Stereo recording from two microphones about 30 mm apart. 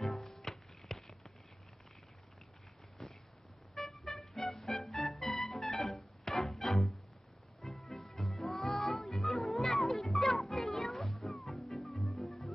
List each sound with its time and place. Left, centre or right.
0.0 s music: centre
0.3 s music: centre
3.0 s a sound: centre
3.7 s music: centre
7.9 s music: centre